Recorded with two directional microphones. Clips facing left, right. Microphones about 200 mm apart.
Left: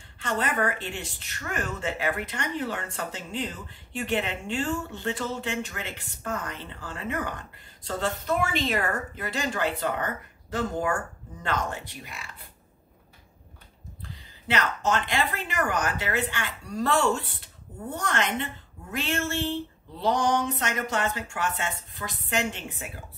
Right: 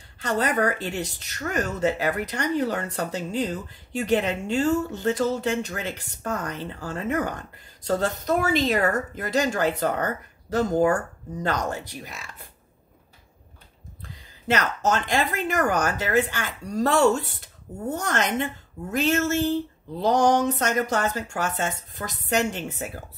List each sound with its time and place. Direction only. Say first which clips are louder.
0.2 s a woman's voice: right 4 dB; 40° right (ahead or behind)
14.5 s a woman's voice: right 3 dB; 40° right (ahead or behind)